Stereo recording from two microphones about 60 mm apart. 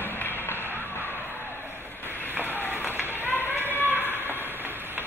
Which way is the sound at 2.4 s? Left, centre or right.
Right.